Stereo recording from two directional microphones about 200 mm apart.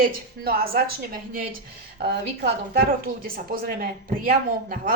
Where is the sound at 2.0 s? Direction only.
55° right (ahead or behind).